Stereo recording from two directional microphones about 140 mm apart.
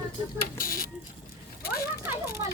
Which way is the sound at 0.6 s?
85° left.